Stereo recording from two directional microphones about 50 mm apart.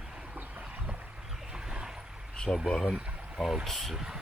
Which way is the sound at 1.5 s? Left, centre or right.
Centre.